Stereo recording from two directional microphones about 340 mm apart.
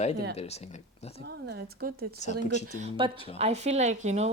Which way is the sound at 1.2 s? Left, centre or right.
Right.